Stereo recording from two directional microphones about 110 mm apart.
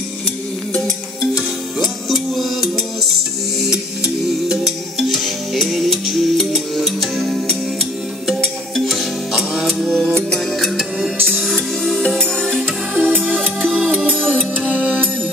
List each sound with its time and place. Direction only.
1.3 s music: centre (ahead or behind)
4.5 s music: centre (ahead or behind)
14.2 s music: 5° left (ahead or behind)
14.7 s music: 15° right (ahead or behind)